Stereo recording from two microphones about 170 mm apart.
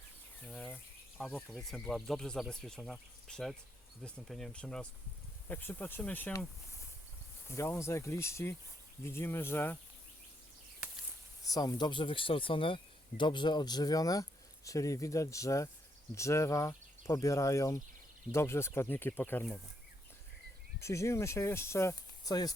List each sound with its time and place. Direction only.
0.4 s bird: 10° left (ahead or behind)
1.3 s speech: centre (ahead or behind)
11.4 s speech: 20° left (ahead or behind)
20.7 s speech: 15° left (ahead or behind)